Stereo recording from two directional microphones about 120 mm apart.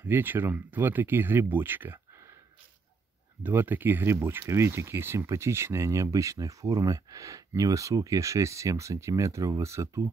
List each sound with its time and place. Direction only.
0.0 s speech: 15° right (ahead or behind)
3.4 s speech: 15° right (ahead or behind)